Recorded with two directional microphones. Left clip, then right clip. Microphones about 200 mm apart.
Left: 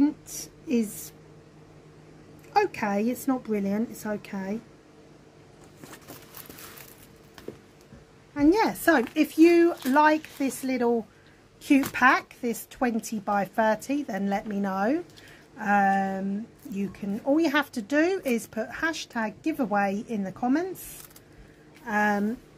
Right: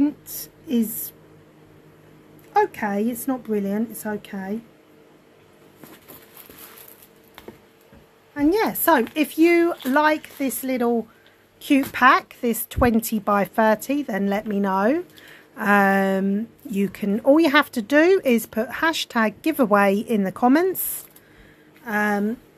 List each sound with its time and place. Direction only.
2.5 s a woman's voice: 15° right (ahead or behind)
8.4 s speech: 20° right (ahead or behind)
15.5 s speech: 35° right (ahead or behind)
21.8 s speech: 25° right (ahead or behind)